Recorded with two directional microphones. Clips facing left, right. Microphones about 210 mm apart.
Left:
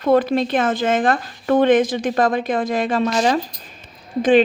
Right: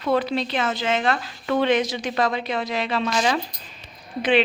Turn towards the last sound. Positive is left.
turn(degrees=45)  # may be behind; listen again after turning